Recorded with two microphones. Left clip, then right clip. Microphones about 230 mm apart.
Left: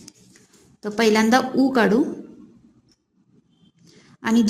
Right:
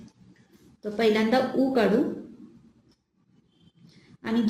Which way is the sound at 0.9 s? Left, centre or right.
Left.